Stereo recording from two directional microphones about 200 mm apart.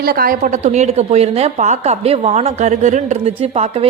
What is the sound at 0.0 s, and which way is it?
A woman's voice, 50° right (ahead or behind).